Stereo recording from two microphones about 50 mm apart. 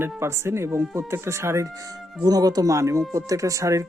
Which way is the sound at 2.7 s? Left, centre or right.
Right.